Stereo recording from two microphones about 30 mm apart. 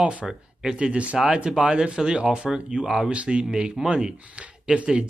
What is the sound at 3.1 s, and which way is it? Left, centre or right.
Speech, right.